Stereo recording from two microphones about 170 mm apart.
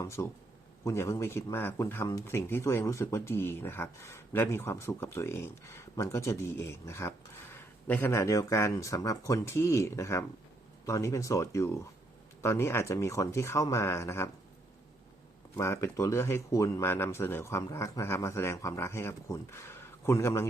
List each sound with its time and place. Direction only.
0.2 s speech: 15° left (ahead or behind)
15.5 s speech: 15° left (ahead or behind)